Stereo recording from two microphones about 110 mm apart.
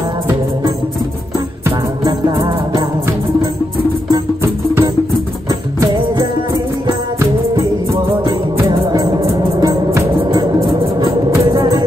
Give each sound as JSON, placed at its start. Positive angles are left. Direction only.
{"t": 2.3, "sound": "music", "side_deg": -30}
{"t": 10.6, "sound": "a sound", "side_deg": -50}
{"t": 11.1, "sound": "music", "side_deg": -35}